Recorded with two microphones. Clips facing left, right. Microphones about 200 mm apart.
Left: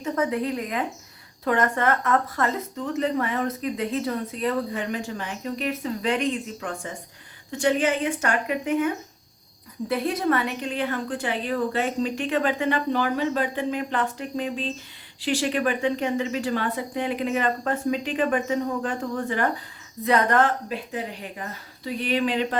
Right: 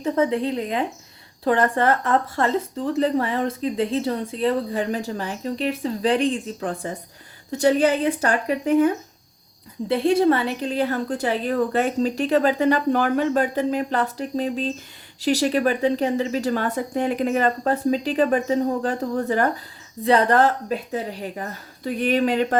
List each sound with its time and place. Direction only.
0.0 s a woman's voice: 30° right (ahead or behind)
9.9 s speech: 30° right (ahead or behind); by 22.5 s 45° right (ahead or behind)